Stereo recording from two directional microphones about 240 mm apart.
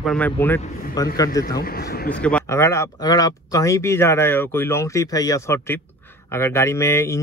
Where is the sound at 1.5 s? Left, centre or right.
Left.